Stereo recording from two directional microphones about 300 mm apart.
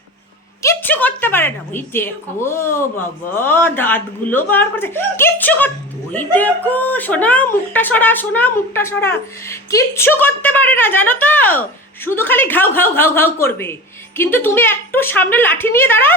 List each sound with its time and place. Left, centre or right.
0.6 s a woman's voice: centre